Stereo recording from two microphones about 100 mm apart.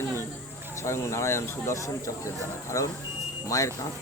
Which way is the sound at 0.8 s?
30° left (ahead or behind).